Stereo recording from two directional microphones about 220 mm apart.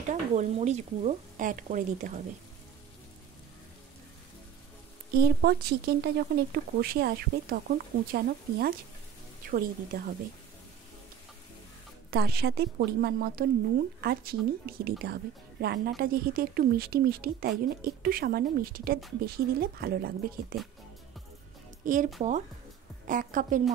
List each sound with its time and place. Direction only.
0.1 s speech: 30° right (ahead or behind)
5.1 s speech: 45° right (ahead or behind)
12.1 s speech: 45° right (ahead or behind)
21.8 s speech: 35° right (ahead or behind)